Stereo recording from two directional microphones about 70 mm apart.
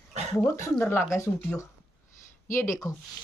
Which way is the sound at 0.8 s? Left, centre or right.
Left.